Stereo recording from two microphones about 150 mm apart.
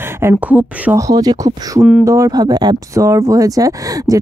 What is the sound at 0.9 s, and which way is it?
Speech, 25° right (ahead or behind).